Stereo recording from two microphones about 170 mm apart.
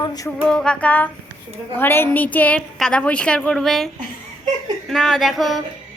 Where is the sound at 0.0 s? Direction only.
25° left (ahead or behind).